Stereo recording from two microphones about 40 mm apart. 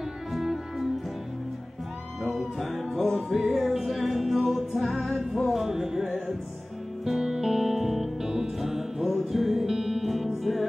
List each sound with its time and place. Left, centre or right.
0.3 s music: centre
2.2 s music: centre
7.1 s music: centre